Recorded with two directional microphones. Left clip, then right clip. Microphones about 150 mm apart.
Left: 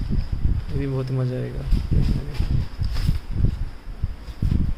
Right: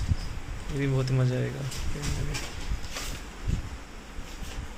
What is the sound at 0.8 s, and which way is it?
Speech, 25° left (ahead or behind).